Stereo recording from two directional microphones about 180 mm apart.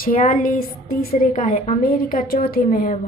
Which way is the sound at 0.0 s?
50° left (ahead or behind).